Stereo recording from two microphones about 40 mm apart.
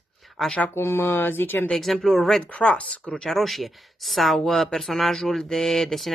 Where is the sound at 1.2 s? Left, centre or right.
Left.